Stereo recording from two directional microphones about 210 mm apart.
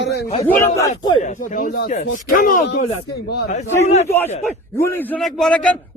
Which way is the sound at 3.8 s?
30° left (ahead or behind).